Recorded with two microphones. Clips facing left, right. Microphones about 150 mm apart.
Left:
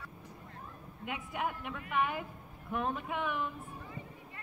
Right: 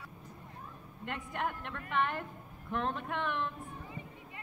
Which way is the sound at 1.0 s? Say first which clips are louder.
Even; 5° left (ahead or behind).